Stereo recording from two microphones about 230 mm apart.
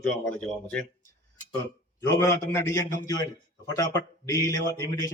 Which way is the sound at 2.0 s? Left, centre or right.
Centre.